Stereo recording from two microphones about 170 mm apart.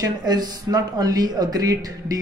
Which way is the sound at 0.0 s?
25° right (ahead or behind).